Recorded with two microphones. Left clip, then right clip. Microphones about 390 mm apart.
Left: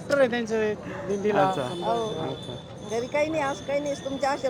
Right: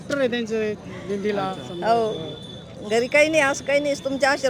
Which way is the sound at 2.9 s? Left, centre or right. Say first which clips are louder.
Right 8 dB; right.